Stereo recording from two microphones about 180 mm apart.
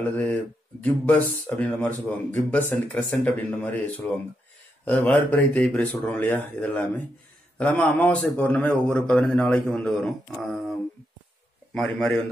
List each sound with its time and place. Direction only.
0.0 s a man's voice: 10° left (ahead or behind)
11.7 s a man's voice: 5° left (ahead or behind)